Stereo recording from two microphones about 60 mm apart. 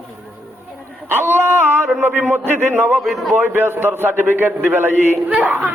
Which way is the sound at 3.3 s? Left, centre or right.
Right.